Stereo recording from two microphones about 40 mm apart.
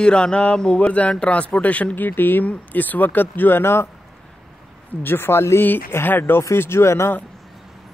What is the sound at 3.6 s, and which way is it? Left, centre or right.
Speech, left.